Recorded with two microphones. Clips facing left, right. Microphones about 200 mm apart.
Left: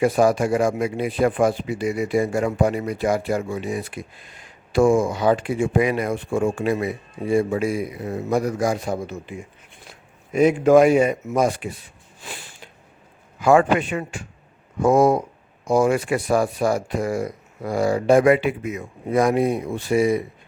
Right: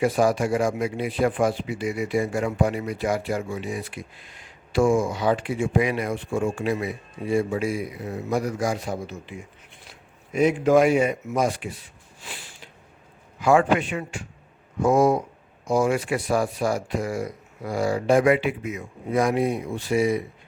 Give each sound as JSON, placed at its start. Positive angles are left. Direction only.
{"t": 0.0, "sound": "speech", "side_deg": 50}
{"t": 10.3, "sound": "speech", "side_deg": 45}
{"t": 13.4, "sound": "speech", "side_deg": 45}